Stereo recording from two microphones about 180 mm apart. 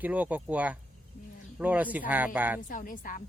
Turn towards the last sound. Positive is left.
turn(degrees=50)  # may be behind; listen again after turning